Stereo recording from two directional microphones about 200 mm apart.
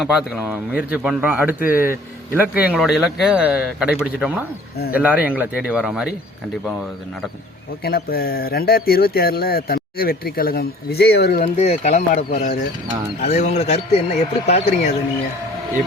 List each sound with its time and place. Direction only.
0.0 s speech: 5° right (ahead or behind)
1.5 s speech: 45° left (ahead or behind)
2.3 s speech: 10° right (ahead or behind)
7.9 s speech: 50° left (ahead or behind)
11.5 s a man's voice: 30° left (ahead or behind)